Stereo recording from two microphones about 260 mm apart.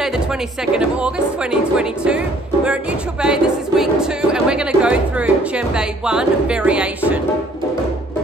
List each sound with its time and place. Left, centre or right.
0.7 s speech: centre